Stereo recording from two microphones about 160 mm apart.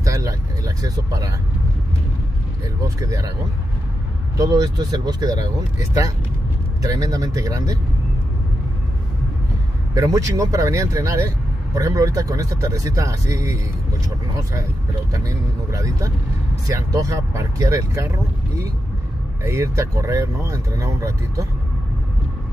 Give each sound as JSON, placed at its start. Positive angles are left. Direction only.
{"t": 0.0, "sound": "speech", "side_deg": -20}
{"t": 3.0, "sound": "speech", "side_deg": -20}
{"t": 4.4, "sound": "speech", "side_deg": -20}
{"t": 9.9, "sound": "speech", "side_deg": -20}
{"t": 15.1, "sound": "speech", "side_deg": -20}
{"t": 19.4, "sound": "speech", "side_deg": -15}